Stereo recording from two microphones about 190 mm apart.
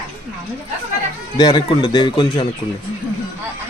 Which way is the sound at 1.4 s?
20° left (ahead or behind).